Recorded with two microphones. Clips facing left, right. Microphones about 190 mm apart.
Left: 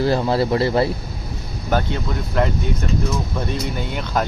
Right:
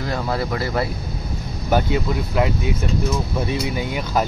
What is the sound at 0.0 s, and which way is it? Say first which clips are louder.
Speech: left 6 dB; 30° left (ahead or behind).